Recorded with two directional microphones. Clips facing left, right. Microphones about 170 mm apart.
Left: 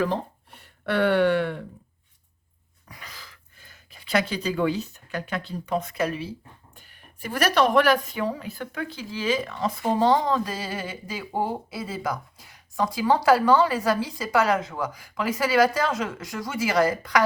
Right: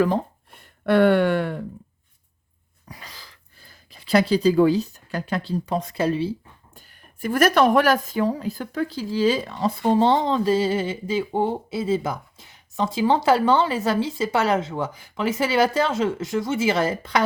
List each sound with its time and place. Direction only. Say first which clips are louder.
0.9 s a sound: right 3 dB; 50° right (ahead or behind)
2.9 s speech: right 2 dB; 35° right (ahead or behind)
6.7 s speech: right 2 dB; 50° right (ahead or behind); by 17.2 s 25° right (ahead or behind)